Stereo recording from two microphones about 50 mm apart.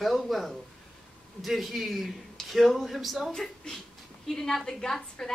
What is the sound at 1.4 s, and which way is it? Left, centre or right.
A man's voice, centre.